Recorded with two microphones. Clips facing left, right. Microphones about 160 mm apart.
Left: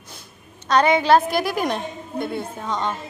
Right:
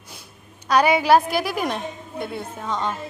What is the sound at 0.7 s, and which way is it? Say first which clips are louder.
A woman's voice: even; 10° right (ahead or behind).